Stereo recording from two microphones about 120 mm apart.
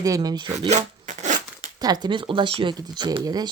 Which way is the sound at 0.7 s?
75° right (ahead or behind).